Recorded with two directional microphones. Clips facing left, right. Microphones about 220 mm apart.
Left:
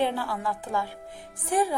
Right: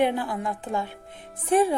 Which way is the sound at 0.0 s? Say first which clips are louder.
Right 3 dB; 20° right (ahead or behind).